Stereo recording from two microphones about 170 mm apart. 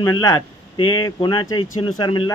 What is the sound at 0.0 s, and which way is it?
Speech, 20° left (ahead or behind).